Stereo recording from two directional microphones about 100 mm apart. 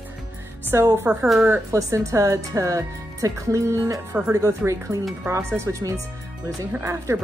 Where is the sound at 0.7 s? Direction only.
30° right (ahead or behind).